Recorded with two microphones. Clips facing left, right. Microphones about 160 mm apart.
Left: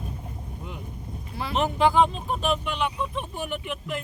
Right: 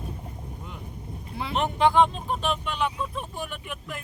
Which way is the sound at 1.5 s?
5° left (ahead or behind).